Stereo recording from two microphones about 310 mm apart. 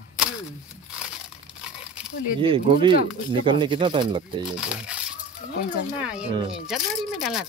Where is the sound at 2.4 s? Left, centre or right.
Centre.